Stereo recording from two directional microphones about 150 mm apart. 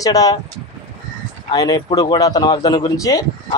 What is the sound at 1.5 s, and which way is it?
A man's voice, 25° left (ahead or behind).